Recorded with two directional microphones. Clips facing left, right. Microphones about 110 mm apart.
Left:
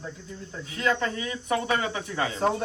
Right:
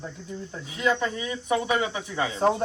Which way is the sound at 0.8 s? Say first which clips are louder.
Right 1 dB; 15° right (ahead or behind).